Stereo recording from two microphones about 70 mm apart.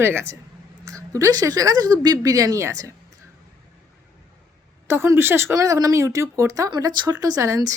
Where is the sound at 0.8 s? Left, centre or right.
Right.